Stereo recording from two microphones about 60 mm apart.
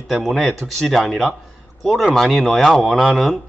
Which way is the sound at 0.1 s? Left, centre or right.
Centre.